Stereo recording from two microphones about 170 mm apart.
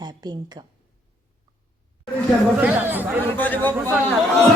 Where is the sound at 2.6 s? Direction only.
10° right (ahead or behind).